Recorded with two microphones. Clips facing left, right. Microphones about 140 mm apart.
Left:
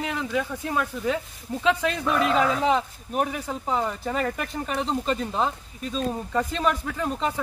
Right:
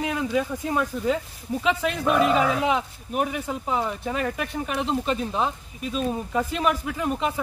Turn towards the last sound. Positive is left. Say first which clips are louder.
# right 1 dB
turn(degrees=-10)  # may be behind; listen again after turning